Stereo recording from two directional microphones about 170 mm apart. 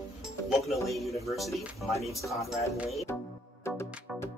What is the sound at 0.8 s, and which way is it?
Speech, centre (ahead or behind).